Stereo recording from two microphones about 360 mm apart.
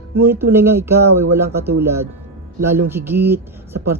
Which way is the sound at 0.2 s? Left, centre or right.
Centre.